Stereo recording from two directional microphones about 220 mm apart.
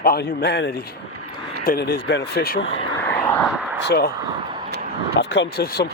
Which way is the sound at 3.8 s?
45° left (ahead or behind).